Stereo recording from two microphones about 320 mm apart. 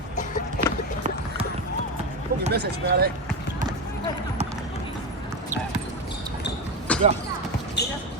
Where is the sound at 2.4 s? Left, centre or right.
Right.